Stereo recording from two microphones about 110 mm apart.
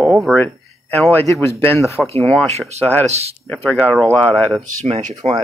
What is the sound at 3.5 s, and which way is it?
Speech, 15° left (ahead or behind).